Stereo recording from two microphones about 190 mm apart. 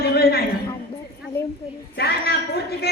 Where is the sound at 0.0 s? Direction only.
55° left (ahead or behind).